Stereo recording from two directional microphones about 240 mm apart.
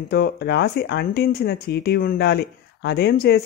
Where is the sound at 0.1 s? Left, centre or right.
Left.